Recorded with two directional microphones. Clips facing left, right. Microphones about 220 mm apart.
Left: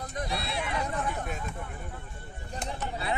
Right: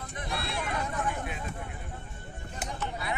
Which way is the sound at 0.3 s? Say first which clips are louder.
Right 3 dB; 50° right (ahead or behind).